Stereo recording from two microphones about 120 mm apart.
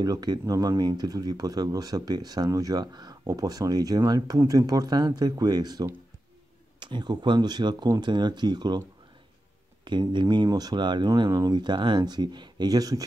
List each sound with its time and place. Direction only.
0.0 s speech: 35° right (ahead or behind)
9.8 s speech: 40° right (ahead or behind)